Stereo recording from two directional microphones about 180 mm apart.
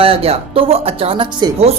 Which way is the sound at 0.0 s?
30° right (ahead or behind).